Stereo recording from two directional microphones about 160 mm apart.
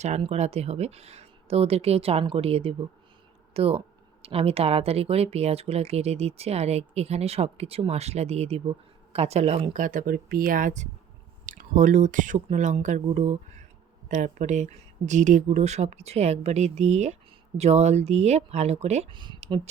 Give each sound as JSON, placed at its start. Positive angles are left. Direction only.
{"t": 0.0, "sound": "speech", "side_deg": -40}
{"t": 19.1, "sound": "speech", "side_deg": -30}